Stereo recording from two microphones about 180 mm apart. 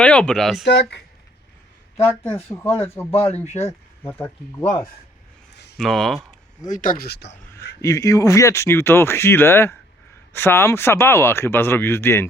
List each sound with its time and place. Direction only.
0.0 s speech: 5° left (ahead or behind)
0.6 s speech: 75° left (ahead or behind)
2.5 s speech: 15° left (ahead or behind)
3.1 s speech: 35° left (ahead or behind)
5.7 s speech: centre (ahead or behind)
6.7 s speech: 50° left (ahead or behind); by 7.3 s 70° left (ahead or behind)
7.8 s speech: 15° left (ahead or behind)